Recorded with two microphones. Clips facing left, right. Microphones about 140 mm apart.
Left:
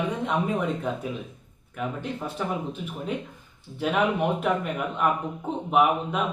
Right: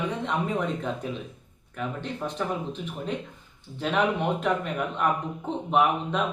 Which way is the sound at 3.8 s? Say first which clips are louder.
Left 1 dB; 10° left (ahead or behind).